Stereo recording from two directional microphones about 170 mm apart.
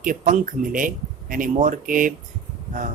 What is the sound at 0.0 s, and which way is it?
Speech, 50° right (ahead or behind).